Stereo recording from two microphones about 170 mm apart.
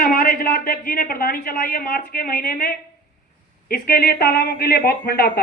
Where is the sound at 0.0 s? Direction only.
55° left (ahead or behind).